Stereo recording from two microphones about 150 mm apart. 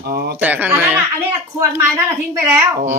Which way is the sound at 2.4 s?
15° right (ahead or behind).